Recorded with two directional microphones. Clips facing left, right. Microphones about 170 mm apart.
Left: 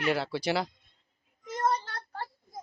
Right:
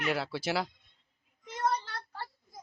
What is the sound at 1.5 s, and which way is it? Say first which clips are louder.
Child singing: left 2 dB; 45° left (ahead or behind).